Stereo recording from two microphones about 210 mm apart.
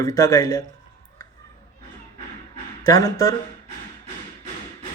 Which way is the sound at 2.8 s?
15° left (ahead or behind).